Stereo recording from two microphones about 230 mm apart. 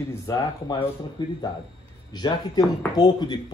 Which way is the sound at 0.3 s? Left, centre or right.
Centre.